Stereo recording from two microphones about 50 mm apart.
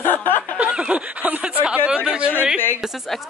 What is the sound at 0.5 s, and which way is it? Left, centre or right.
A woman's voice, right.